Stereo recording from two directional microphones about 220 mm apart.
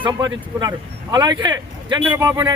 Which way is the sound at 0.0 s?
15° right (ahead or behind).